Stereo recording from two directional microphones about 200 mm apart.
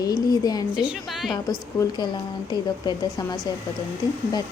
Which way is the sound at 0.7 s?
5° right (ahead or behind).